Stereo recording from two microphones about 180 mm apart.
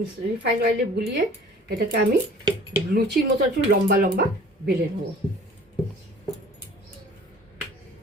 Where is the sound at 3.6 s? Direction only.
55° right (ahead or behind).